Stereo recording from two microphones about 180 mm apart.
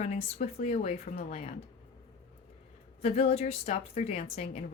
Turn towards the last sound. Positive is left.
turn(degrees=35)  # may be behind; listen again after turning